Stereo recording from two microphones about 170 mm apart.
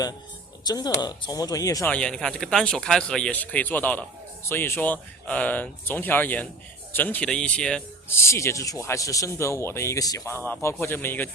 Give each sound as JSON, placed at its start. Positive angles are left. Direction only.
{"t": 0.6, "sound": "speech", "side_deg": 25}
{"t": 1.9, "sound": "speech", "side_deg": 5}